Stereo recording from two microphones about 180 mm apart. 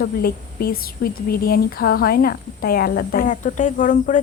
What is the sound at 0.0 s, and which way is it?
A woman's voice, 60° left (ahead or behind).